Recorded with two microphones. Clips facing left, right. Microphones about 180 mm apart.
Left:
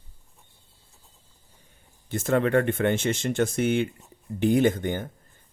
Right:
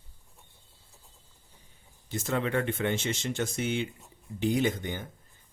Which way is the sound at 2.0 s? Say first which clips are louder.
Left 7 dB; 55° left (ahead or behind).